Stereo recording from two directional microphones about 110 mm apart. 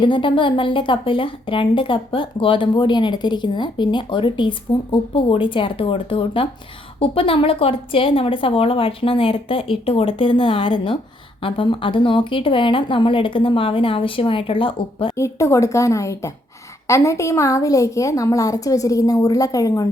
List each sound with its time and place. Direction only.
0.0 s a woman's voice: 50° left (ahead or behind)
15.1 s a woman's voice: 25° left (ahead or behind)